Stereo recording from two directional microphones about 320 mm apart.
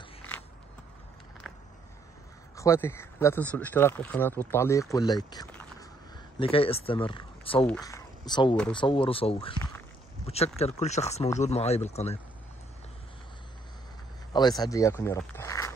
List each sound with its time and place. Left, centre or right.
1.5 s a sound: centre
2.5 s speech: centre
14.3 s speech: centre